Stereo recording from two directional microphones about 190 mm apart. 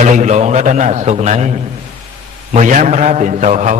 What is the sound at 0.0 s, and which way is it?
A man's voice, 40° right (ahead or behind).